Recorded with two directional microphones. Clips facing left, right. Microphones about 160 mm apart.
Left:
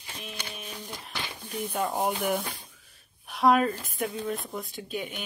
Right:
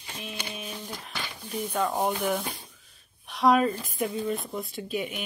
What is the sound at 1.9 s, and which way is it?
Speech, 10° left (ahead or behind).